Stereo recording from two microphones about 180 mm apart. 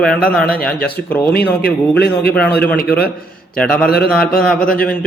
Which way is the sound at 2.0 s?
65° left (ahead or behind).